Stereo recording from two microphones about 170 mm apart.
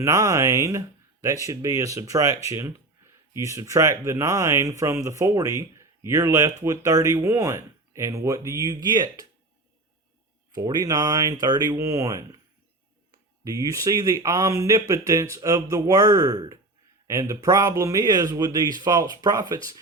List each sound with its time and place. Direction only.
0.0 s speech: 20° right (ahead or behind)
10.5 s speech: 20° right (ahead or behind)